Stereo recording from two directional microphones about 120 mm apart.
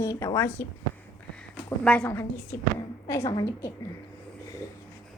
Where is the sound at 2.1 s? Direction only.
20° left (ahead or behind).